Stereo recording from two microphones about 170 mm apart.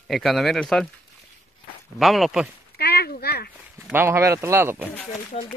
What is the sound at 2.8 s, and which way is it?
Speech, 70° left (ahead or behind).